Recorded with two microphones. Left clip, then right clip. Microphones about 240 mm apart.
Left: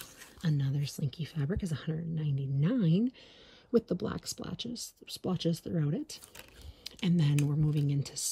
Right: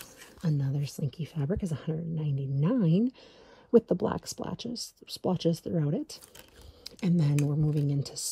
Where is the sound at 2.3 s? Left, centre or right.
Centre.